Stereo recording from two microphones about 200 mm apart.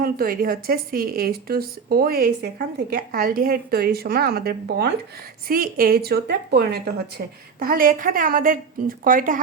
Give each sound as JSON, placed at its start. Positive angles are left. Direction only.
{"t": 0.0, "sound": "a woman's voice", "side_deg": -45}